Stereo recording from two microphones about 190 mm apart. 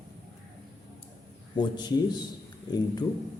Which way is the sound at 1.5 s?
20° left (ahead or behind).